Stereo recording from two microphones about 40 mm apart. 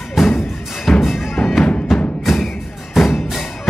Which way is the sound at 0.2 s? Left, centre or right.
Centre.